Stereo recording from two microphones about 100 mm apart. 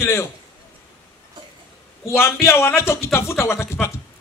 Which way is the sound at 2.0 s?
25° left (ahead or behind).